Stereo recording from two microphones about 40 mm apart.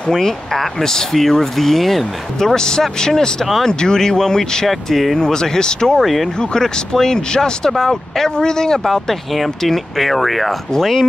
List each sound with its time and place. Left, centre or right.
0.1 s speech: centre
2.5 s speech: centre
4.6 s speech: centre
5.2 s speech: centre
5.9 s speech: centre
6.5 s speech: centre
8.8 s speech: centre